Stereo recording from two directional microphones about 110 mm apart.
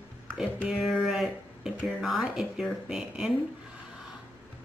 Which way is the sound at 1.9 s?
Centre (ahead or behind).